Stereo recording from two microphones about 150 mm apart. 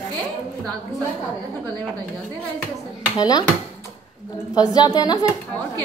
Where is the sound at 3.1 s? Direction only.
25° left (ahead or behind).